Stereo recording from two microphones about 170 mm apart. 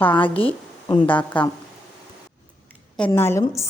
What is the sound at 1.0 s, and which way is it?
Speech, 10° left (ahead or behind).